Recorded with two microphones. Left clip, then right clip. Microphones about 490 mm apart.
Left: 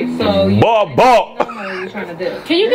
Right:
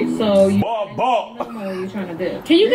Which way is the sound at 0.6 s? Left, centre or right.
Left.